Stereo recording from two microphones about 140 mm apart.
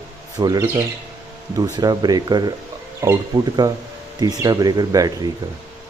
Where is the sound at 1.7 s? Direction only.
30° right (ahead or behind).